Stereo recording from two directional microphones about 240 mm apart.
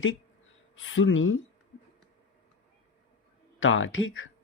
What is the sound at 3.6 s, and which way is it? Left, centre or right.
Speech, left.